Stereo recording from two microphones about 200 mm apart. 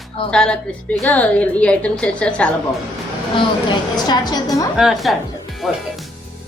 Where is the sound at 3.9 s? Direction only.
20° left (ahead or behind).